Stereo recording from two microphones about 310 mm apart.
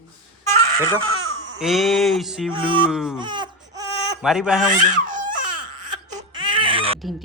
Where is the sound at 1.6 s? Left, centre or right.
Centre.